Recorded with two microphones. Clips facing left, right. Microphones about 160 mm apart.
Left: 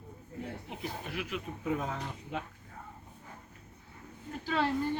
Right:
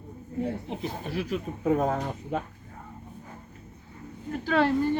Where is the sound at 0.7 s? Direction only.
30° right (ahead or behind); by 2.4 s 50° right (ahead or behind).